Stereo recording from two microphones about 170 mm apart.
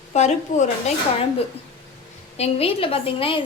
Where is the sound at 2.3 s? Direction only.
35° left (ahead or behind).